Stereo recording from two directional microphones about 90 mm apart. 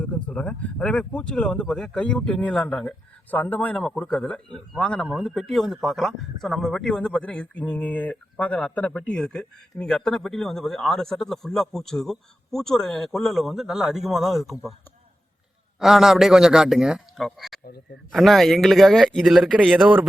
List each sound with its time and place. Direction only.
0.0 s speech: 15° left (ahead or behind)
3.8 s speech: 5° left (ahead or behind)
15.8 s speech: 5° right (ahead or behind); by 20.1 s 20° right (ahead or behind)